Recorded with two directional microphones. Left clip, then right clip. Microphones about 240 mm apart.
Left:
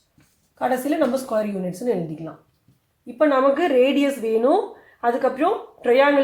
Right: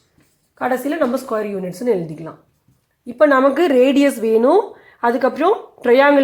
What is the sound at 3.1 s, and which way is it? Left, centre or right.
Speech, right.